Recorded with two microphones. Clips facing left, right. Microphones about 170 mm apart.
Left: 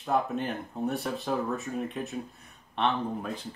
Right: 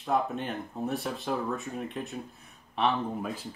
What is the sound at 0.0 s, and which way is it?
Speech, centre (ahead or behind).